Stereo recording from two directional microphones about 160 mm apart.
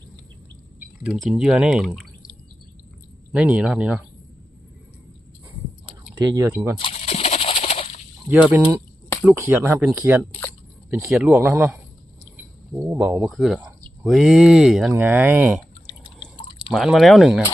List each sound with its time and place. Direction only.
1.0 s speech: 5° right (ahead or behind)
3.3 s speech: 5° right (ahead or behind)
6.1 s speech: 20° right (ahead or behind)
6.7 s a sound: 35° left (ahead or behind)
8.3 s speech: 10° right (ahead or behind)
13.3 s speech: centre (ahead or behind)
16.2 s drip: 5° right (ahead or behind)